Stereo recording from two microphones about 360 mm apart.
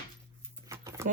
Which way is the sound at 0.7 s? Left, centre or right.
Centre.